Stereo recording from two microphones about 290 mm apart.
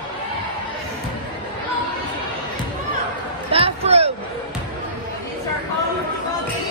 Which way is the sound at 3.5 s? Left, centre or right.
Centre.